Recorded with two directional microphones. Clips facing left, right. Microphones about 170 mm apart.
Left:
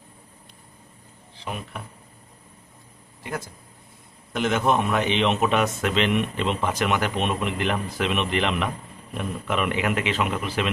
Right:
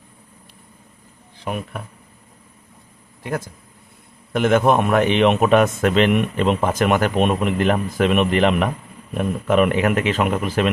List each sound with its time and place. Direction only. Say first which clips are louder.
1.4 s speech: right 6 dB; 55° right (ahead or behind)
3.2 s a man's voice: right 6 dB; 55° right (ahead or behind)